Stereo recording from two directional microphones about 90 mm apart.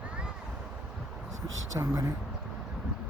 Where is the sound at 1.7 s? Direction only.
35° right (ahead or behind).